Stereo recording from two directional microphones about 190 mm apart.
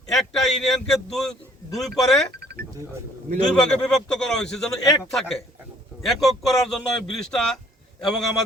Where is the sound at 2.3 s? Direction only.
55° right (ahead or behind).